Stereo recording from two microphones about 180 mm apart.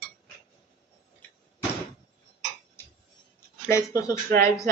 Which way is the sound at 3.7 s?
20° left (ahead or behind).